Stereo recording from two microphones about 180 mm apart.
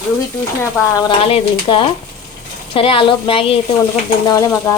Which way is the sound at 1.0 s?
25° left (ahead or behind).